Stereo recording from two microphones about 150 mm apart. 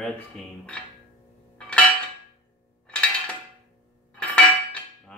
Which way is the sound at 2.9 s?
10° left (ahead or behind).